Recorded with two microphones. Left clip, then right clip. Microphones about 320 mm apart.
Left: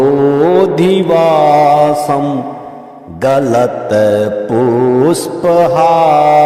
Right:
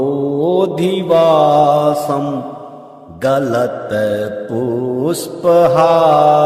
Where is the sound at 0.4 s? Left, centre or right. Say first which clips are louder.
Left 5 dB; centre.